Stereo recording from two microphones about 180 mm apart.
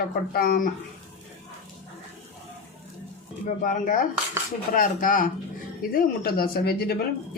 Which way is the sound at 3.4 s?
50° left (ahead or behind).